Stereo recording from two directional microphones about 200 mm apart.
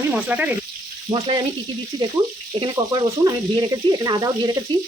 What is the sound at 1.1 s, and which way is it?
Frying, 25° right (ahead or behind).